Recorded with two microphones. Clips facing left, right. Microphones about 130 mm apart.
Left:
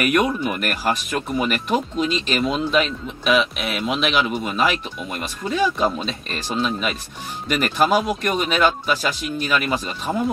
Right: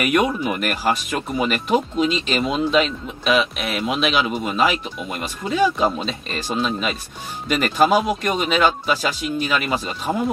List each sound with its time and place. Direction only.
0.3 s speech: 5° right (ahead or behind)
1.2 s speech: centre (ahead or behind)
1.7 s speech: 15° right (ahead or behind)
2.4 s speech: centre (ahead or behind)